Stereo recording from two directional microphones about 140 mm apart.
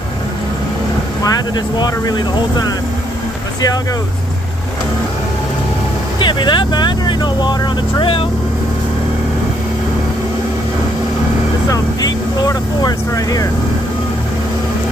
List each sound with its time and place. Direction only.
1.2 s speech: 25° left (ahead or behind)
6.1 s speech: 35° left (ahead or behind)
11.7 s speech: 25° left (ahead or behind)